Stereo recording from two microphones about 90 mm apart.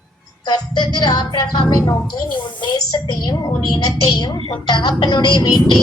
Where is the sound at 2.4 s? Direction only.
55° left (ahead or behind).